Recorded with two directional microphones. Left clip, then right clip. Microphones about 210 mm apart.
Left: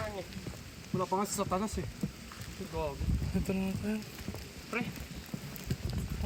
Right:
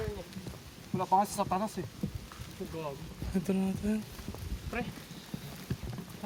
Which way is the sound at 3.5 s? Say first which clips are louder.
Right 3 dB; 45° right (ahead or behind).